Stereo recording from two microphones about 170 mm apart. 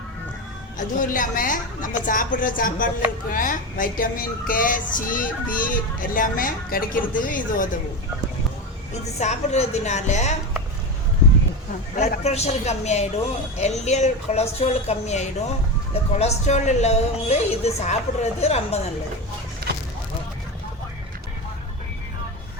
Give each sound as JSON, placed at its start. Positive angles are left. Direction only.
{"t": 0.8, "sound": "a woman's voice", "side_deg": 50}
{"t": 9.1, "sound": "a woman's voice", "side_deg": 40}
{"t": 11.9, "sound": "a woman's voice", "side_deg": 40}